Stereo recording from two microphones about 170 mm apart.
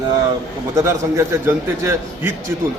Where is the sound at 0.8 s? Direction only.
15° right (ahead or behind).